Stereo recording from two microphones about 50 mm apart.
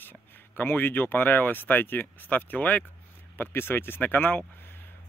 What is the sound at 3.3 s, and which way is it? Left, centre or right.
Speech, left.